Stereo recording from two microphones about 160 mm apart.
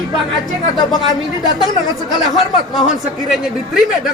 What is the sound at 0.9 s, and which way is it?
Speech, 25° left (ahead or behind).